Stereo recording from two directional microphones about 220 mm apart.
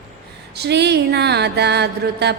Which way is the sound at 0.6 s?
50° right (ahead or behind).